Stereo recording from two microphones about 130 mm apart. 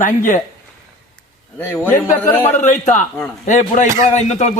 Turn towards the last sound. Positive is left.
turn(degrees=60)  # may be behind; listen again after turning